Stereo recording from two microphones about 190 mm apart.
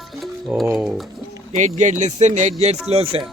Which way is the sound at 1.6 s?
40° right (ahead or behind).